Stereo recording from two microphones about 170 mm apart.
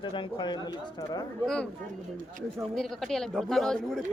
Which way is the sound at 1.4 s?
5° left (ahead or behind).